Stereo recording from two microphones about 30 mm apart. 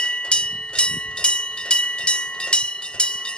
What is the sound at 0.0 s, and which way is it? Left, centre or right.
Train, left.